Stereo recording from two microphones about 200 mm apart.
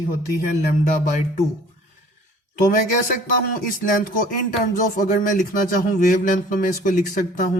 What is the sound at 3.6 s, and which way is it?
Speech, 45° left (ahead or behind).